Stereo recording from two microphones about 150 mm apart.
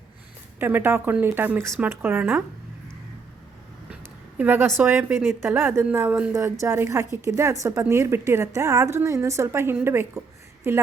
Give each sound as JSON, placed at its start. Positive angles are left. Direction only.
{"t": 0.6, "sound": "a woman's voice", "side_deg": -15}
{"t": 4.0, "sound": "a sound", "side_deg": -10}
{"t": 4.8, "sound": "a woman's voice", "side_deg": -15}